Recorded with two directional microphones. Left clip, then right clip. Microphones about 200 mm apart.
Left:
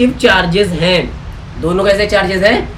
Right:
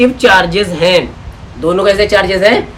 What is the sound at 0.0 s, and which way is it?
A woman's voice, 15° right (ahead or behind).